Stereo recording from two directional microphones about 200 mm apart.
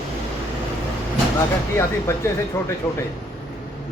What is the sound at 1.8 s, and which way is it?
Speech, 15° left (ahead or behind).